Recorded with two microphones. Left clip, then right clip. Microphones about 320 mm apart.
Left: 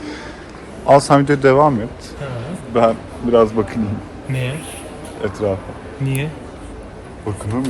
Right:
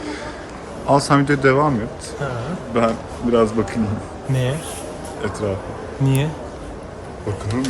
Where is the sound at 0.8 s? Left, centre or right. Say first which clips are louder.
Left 5 dB; centre.